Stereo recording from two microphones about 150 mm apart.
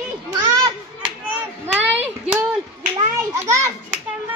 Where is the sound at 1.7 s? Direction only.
10° right (ahead or behind).